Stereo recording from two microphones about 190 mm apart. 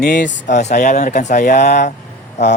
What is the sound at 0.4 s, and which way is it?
Speech, 40° left (ahead or behind).